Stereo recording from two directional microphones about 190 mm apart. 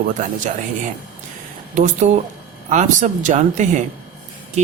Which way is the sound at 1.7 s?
40° right (ahead or behind).